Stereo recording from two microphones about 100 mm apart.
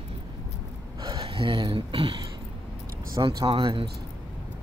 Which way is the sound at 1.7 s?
70° right (ahead or behind).